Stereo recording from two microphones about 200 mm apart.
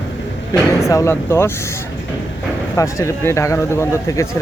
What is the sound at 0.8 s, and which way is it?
Speech, 15° left (ahead or behind).